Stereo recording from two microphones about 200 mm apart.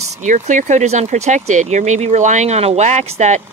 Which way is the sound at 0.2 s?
40° right (ahead or behind).